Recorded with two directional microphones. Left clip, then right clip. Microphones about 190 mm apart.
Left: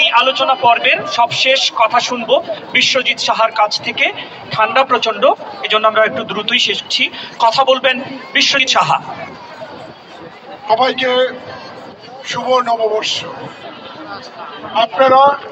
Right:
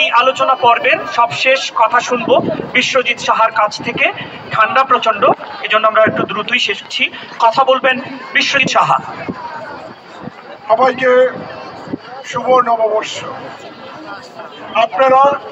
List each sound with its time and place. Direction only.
0.0 s a man's voice: 10° right (ahead or behind)
10.7 s a man's voice: 15° right (ahead or behind)
12.3 s a man's voice: 10° right (ahead or behind)
14.7 s a man's voice: 20° right (ahead or behind)